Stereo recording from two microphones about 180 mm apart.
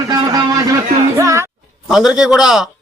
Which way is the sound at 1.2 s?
15° right (ahead or behind).